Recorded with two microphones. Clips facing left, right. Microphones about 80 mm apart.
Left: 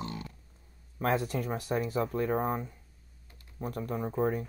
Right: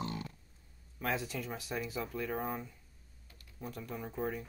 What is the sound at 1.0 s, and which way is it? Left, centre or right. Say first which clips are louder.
Speech: left 7 dB; left.